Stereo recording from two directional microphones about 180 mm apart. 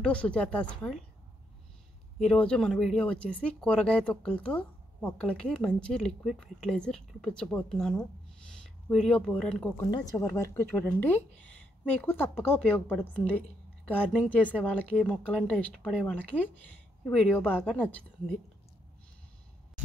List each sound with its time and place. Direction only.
0.0 s a woman's voice: 5° left (ahead or behind)
2.1 s a woman's voice: 5° left (ahead or behind)
9.8 s a woman's voice: 20° left (ahead or behind)